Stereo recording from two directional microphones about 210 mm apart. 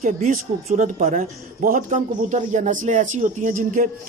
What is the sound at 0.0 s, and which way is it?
Speech, 35° right (ahead or behind).